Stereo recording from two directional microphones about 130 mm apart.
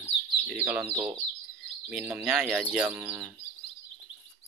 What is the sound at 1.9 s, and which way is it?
Speech, 10° right (ahead or behind).